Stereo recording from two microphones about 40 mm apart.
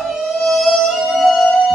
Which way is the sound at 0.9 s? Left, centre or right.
Centre.